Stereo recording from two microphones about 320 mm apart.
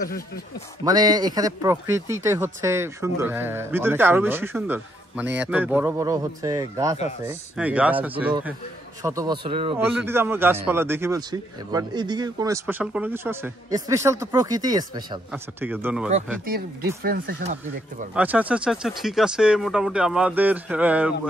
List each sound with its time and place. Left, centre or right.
0.8 s a man's voice: centre
16.4 s speech: right
18.1 s speech: centre